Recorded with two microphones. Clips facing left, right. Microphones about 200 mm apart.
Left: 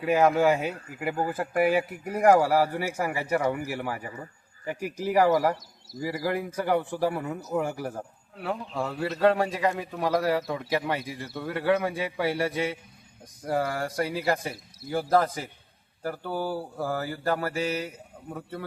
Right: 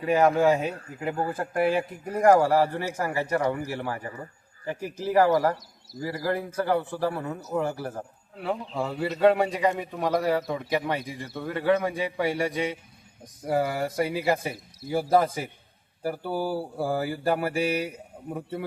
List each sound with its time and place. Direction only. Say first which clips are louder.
0.0 s a man's voice: right 1 dB; 5° left (ahead or behind); by 18.6 s 15° right (ahead or behind)